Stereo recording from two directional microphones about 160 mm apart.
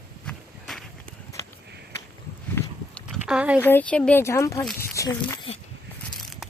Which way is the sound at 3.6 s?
10° left (ahead or behind).